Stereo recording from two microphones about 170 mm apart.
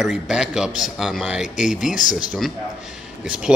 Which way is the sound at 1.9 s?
50° left (ahead or behind).